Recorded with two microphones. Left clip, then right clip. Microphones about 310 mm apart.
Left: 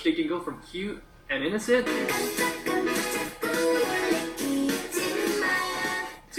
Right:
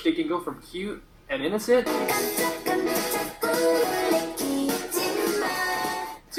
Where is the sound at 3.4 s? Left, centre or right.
Centre.